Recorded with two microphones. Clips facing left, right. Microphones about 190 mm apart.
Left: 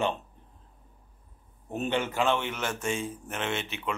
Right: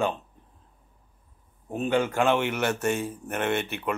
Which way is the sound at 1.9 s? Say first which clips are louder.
Right 6 dB; 10° right (ahead or behind).